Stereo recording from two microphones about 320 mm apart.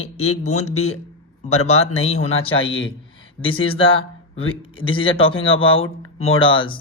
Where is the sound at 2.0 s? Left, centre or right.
Left.